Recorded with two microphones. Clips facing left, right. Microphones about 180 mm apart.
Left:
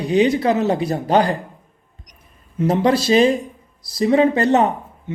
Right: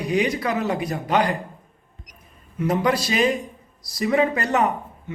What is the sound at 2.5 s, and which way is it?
Speech, 30° left (ahead or behind).